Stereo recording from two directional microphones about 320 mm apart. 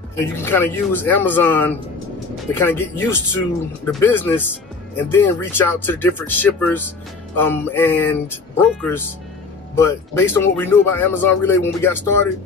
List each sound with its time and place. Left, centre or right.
0.1 s speech: centre